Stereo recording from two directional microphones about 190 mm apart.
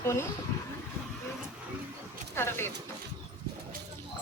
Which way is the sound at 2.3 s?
15° left (ahead or behind).